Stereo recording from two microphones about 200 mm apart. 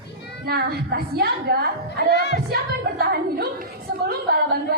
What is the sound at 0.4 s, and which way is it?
A woman's voice, 50° right (ahead or behind).